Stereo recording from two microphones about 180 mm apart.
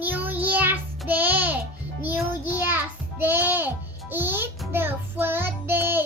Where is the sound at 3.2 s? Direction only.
10° right (ahead or behind).